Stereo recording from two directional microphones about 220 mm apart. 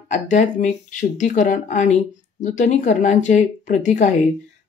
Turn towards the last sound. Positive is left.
turn(degrees=35)  # may be behind; listen again after turning